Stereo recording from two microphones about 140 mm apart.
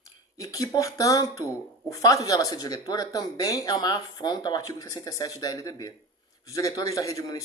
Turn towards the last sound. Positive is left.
turn(degrees=25)  # may be behind; listen again after turning